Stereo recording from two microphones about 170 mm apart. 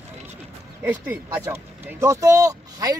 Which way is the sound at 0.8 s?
10° right (ahead or behind).